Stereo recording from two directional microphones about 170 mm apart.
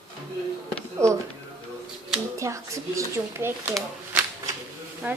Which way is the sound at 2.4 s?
15° right (ahead or behind).